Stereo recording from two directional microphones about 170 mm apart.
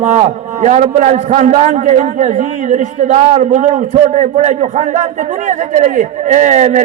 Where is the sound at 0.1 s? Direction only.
45° right (ahead or behind).